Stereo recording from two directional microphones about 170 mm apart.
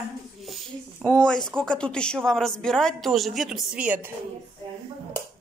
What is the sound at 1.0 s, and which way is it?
Speech, 5° left (ahead or behind).